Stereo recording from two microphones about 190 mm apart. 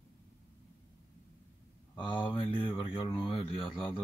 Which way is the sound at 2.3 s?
25° left (ahead or behind).